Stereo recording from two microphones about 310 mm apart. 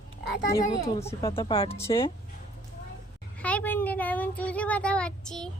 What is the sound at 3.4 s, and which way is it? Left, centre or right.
A woman's voice, centre.